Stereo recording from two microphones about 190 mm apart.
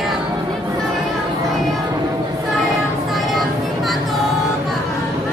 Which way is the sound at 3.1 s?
Centre (ahead or behind).